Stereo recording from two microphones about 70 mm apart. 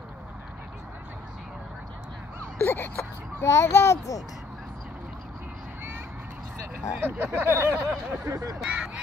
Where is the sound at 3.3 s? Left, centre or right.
Left.